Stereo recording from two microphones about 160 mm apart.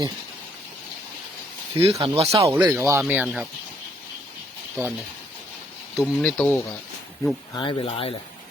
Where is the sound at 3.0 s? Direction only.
5° right (ahead or behind).